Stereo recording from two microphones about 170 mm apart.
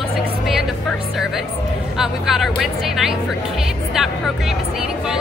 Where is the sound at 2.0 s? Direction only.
Centre (ahead or behind).